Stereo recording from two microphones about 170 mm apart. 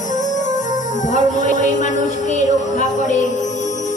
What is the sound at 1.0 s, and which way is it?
Music, 45° left (ahead or behind).